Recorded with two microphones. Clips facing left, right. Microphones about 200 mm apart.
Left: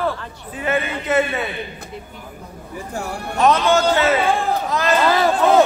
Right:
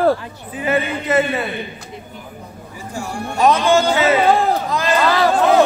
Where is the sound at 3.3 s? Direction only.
Centre (ahead or behind).